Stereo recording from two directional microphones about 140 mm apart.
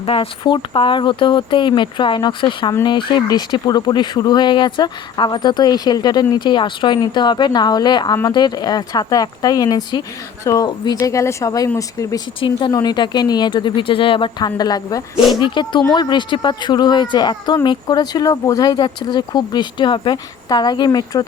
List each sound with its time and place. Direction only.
0.0 s speech: 40° left (ahead or behind); by 12.2 s 25° left (ahead or behind)
12.4 s speech: 35° left (ahead or behind)